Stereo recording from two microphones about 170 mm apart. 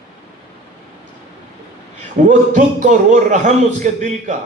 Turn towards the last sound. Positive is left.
turn(degrees=-45)  # may be behind; listen again after turning